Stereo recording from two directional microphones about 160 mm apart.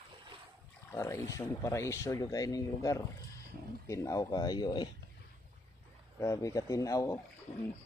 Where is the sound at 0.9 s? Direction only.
15° left (ahead or behind).